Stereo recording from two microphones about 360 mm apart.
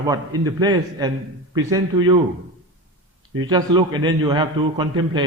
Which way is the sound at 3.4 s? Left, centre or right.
Centre.